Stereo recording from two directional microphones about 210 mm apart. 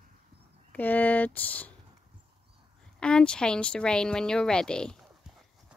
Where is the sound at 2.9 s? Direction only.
5° left (ahead or behind).